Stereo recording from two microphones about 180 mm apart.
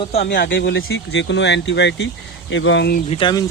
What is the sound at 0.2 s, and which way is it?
Speech, 70° left (ahead or behind).